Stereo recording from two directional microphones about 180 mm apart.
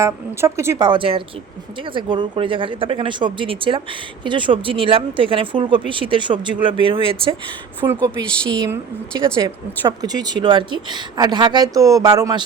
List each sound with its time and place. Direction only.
0.0 s speech: 15° right (ahead or behind)
7.8 s speech: 20° right (ahead or behind)
8.2 s a woman's voice: 5° left (ahead or behind)
9.8 s speech: 20° right (ahead or behind)